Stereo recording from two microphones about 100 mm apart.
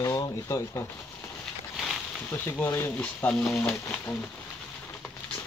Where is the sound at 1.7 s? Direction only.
Centre (ahead or behind).